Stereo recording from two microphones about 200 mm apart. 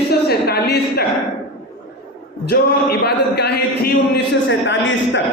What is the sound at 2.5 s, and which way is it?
A man's voice, 50° left (ahead or behind).